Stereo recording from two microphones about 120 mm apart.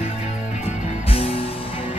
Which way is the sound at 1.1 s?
55° left (ahead or behind).